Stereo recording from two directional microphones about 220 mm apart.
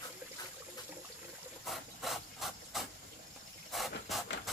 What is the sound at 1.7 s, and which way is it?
Rub, centre (ahead or behind).